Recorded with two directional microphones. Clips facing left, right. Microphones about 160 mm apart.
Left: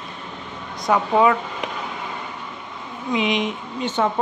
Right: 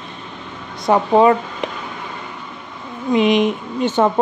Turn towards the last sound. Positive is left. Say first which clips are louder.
# right 6 dB
turn(degrees=-45)  # may be behind; listen again after turning